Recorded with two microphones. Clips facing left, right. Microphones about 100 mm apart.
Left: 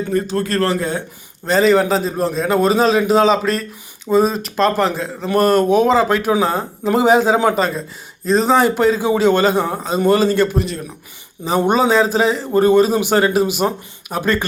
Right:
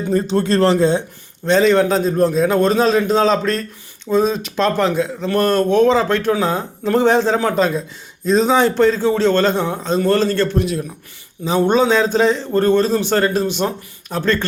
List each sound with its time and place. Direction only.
0.1 s speech: 30° right (ahead or behind)
1.5 s a man's voice: 5° left (ahead or behind)
10.6 s a man's voice: centre (ahead or behind)